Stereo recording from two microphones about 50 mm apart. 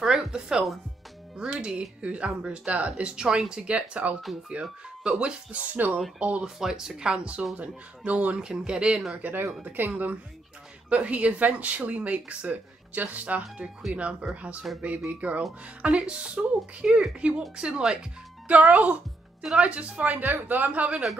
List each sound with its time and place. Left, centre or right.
0.0 s speech: centre; by 6.4 s right
6.4 s speech: centre
7.5 s speech: right
8.4 s speech: centre
9.2 s speech: right
10.9 s speech: right